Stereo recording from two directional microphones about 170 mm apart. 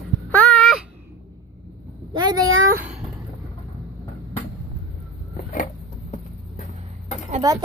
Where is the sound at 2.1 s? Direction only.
25° right (ahead or behind).